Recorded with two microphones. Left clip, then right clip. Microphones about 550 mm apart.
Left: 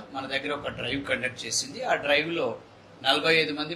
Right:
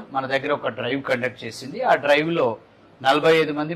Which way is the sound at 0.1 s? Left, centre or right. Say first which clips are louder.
Right 8 dB; right.